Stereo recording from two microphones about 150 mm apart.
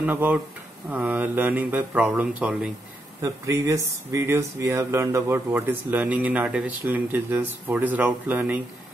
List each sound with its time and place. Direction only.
0.0 s speech: 10° right (ahead or behind)
3.2 s speech: 20° right (ahead or behind)